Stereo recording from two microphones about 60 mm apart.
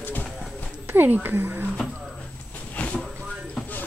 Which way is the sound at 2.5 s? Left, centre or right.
Left.